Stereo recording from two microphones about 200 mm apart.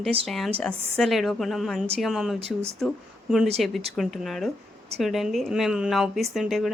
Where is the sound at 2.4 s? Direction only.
30° right (ahead or behind).